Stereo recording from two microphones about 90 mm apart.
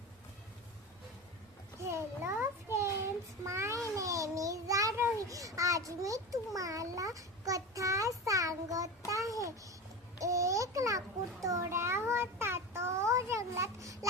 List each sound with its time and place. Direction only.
1.8 s a sound: 30° right (ahead or behind)
8.2 s child singing: 35° right (ahead or behind)
10.2 s babbling: 35° right (ahead or behind)
11.4 s child singing: 35° right (ahead or behind)